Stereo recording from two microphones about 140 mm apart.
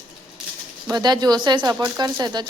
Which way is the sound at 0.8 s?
30° right (ahead or behind).